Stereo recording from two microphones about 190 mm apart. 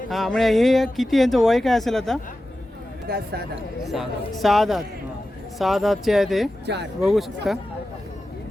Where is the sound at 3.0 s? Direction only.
55° right (ahead or behind).